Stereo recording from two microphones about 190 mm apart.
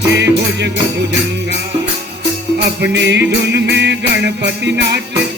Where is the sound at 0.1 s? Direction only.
65° right (ahead or behind).